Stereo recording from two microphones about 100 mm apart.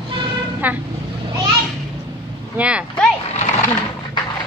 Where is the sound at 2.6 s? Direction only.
10° right (ahead or behind).